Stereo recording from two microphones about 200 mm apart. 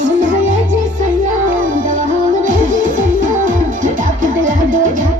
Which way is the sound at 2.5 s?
40° right (ahead or behind).